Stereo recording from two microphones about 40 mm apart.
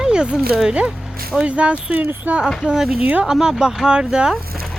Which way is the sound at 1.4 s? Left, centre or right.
Right.